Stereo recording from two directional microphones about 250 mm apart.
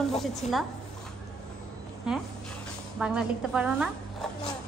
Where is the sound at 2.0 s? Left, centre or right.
Centre.